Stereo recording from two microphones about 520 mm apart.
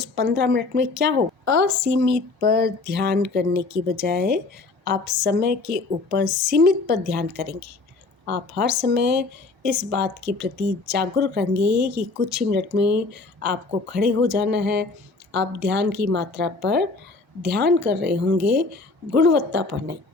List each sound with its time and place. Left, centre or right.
0.0 s a woman's voice: centre